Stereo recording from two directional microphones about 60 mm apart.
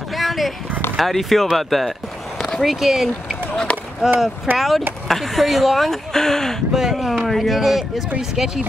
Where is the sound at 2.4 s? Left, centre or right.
Centre.